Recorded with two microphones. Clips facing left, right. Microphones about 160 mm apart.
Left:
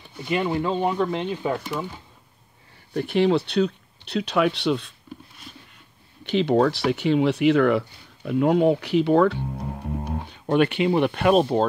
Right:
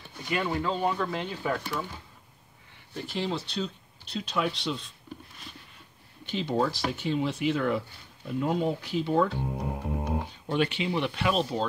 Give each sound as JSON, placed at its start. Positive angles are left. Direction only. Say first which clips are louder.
{"t": 0.3, "sound": "speech", "louder": "left 5 dB", "side_deg": 20}
{"t": 2.9, "sound": "speech", "louder": "left 12 dB", "side_deg": 65}
{"t": 6.2, "sound": "speech", "louder": "left 8 dB", "side_deg": 70}